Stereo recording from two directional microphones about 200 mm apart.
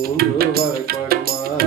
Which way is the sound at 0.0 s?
50° right (ahead or behind).